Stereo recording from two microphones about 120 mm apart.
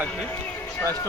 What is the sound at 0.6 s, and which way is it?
Music, 20° left (ahead or behind).